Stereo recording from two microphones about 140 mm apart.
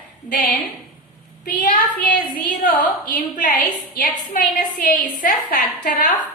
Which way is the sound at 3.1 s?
70° left (ahead or behind).